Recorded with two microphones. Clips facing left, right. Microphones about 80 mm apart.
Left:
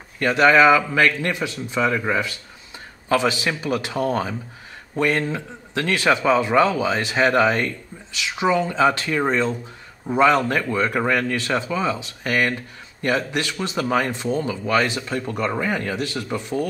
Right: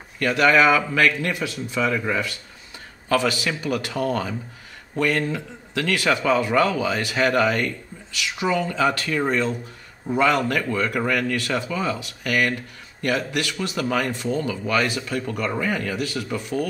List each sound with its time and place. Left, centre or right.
0.2 s a man's voice: left
1.0 s a man's voice: centre
1.7 s a man's voice: centre